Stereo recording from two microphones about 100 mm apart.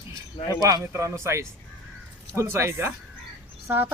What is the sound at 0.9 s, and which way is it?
Speech, 30° right (ahead or behind).